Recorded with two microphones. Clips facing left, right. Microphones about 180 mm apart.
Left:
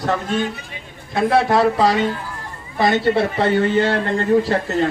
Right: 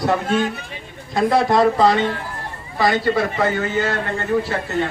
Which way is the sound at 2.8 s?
25° left (ahead or behind).